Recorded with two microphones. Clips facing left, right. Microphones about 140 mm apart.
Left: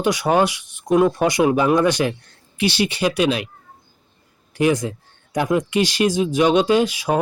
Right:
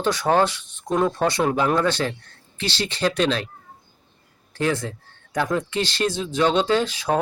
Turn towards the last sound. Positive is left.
turn(degrees=10)  # may be behind; listen again after turning